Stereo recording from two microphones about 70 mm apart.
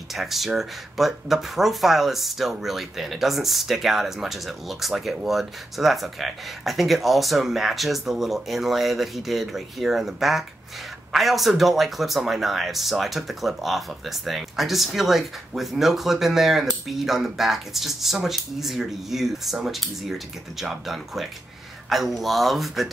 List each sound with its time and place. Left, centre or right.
0.1 s speech: centre